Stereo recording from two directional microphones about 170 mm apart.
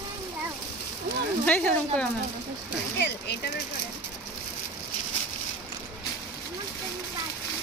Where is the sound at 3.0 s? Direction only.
70° left (ahead or behind).